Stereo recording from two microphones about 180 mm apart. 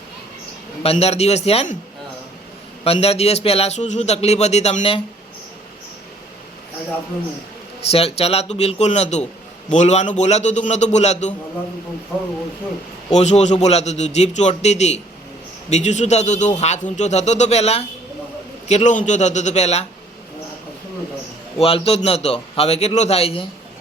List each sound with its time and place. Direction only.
0.8 s speech: 35° left (ahead or behind)
2.8 s speech: 35° left (ahead or behind)
7.8 s speech: 35° left (ahead or behind)
13.1 s speech: 40° left (ahead or behind)
21.6 s speech: 35° left (ahead or behind)